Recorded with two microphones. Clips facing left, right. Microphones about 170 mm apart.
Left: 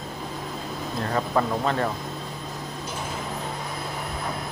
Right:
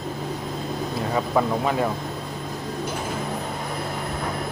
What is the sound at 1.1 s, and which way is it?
Speech, 10° right (ahead or behind).